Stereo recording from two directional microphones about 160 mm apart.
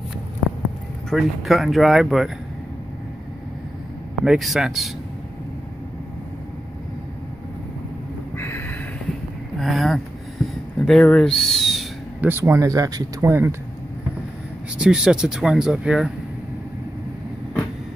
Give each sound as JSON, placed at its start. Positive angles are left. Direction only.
{"t": 1.1, "sound": "speech", "side_deg": 0}
{"t": 4.2, "sound": "speech", "side_deg": 0}
{"t": 8.4, "sound": "a sound", "side_deg": 15}
{"t": 9.6, "sound": "a sound", "side_deg": 0}
{"t": 12.2, "sound": "speech", "side_deg": -15}
{"t": 14.8, "sound": "speech", "side_deg": -5}